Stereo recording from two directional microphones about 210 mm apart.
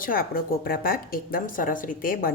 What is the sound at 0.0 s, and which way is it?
A woman's voice, 45° left (ahead or behind).